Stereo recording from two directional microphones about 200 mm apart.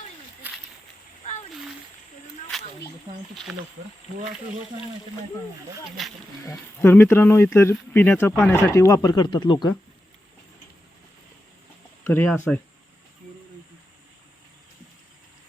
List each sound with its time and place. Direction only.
2.5 s a sound: centre (ahead or behind)
3.5 s speech: centre (ahead or behind)
6.4 s speech: 10° left (ahead or behind)
12.0 s speech: 10° left (ahead or behind)